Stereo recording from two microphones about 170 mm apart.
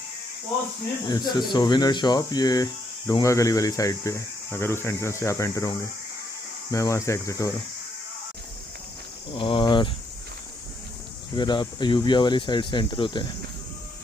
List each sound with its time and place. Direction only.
1.0 s speech: 25° left (ahead or behind)
9.3 s speech: 30° left (ahead or behind)
11.3 s speech: 25° left (ahead or behind)